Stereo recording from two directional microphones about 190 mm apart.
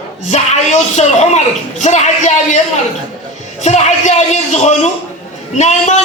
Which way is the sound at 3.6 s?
35° left (ahead or behind).